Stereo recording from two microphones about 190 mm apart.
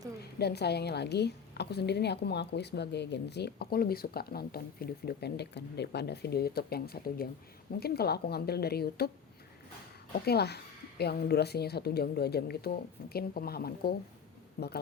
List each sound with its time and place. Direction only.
0.2 s a woman's voice: 60° left (ahead or behind)
10.2 s a woman's voice: 60° left (ahead or behind)